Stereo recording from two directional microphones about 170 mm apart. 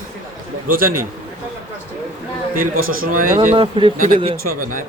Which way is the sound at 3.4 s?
30° right (ahead or behind).